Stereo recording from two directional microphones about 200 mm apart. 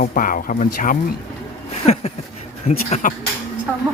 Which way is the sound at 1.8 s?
30° left (ahead or behind).